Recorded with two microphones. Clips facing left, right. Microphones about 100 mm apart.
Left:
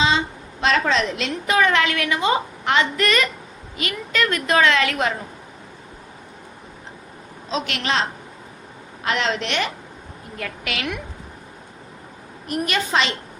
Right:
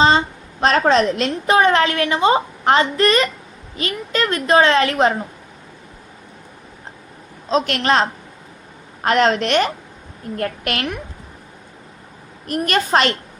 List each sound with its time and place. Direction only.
0.6 s a woman's voice: 40° right (ahead or behind)
7.5 s a woman's voice: 45° right (ahead or behind)
9.0 s a woman's voice: 45° right (ahead or behind)
12.5 s a woman's voice: 50° right (ahead or behind)